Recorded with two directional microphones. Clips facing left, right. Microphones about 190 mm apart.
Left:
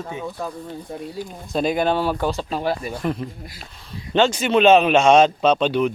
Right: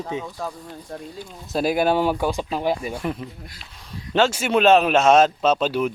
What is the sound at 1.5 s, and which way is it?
Speech, 5° right (ahead or behind).